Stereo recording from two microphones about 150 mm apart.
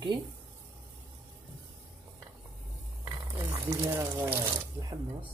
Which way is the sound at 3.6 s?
20° right (ahead or behind).